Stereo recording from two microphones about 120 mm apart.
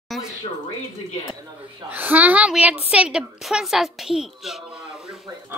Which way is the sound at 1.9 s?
15° right (ahead or behind).